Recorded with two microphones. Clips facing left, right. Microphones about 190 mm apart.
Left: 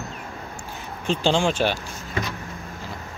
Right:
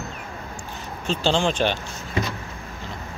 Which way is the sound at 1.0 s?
15° left (ahead or behind).